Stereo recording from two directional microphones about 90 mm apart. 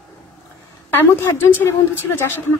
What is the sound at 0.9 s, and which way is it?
A woman's voice, 25° left (ahead or behind).